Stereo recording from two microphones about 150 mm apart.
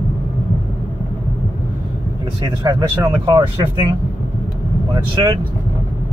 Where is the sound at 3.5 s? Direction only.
35° right (ahead or behind).